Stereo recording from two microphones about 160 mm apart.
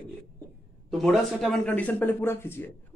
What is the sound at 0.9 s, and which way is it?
Speech, centre (ahead or behind).